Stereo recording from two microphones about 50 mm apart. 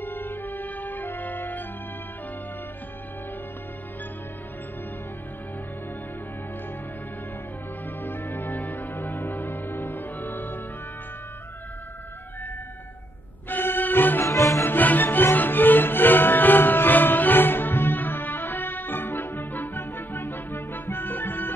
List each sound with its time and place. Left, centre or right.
0.0 s music: left
8.0 s music: left
13.5 s music: left
14.2 s music: left
14.6 s music: left